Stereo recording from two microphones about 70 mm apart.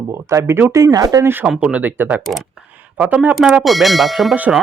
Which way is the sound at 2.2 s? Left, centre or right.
Centre.